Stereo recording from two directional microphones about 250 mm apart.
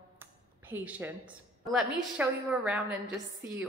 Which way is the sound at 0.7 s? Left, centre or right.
Centre.